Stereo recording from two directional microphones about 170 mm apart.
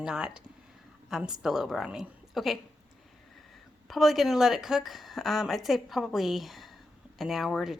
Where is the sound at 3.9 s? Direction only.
Centre (ahead or behind).